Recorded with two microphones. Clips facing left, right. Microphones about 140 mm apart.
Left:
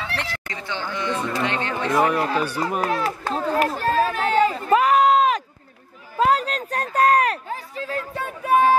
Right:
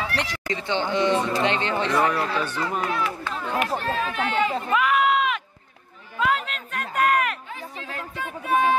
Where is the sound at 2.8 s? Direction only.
35° left (ahead or behind).